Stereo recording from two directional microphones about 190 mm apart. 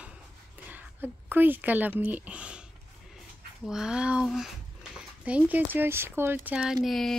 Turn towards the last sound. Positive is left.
turn(degrees=0)  # may be behind; listen again after turning